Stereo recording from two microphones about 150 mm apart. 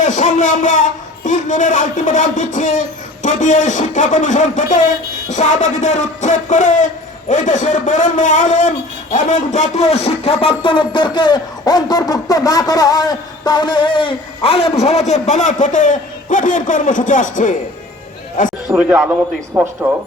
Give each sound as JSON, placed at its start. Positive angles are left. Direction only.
{"t": 0.0, "sound": "a man's voice", "side_deg": 55}
{"t": 18.7, "sound": "speech", "side_deg": -10}